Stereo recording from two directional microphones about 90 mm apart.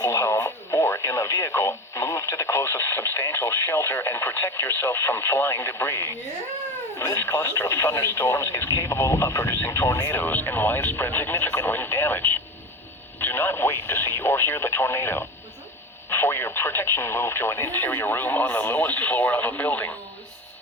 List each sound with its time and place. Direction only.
0.0 s speech: 35° left (ahead or behind)